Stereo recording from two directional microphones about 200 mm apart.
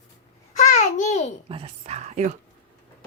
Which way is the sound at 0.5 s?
35° left (ahead or behind).